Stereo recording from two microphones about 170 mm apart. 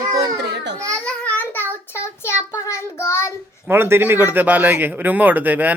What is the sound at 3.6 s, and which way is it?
Speech, 15° right (ahead or behind).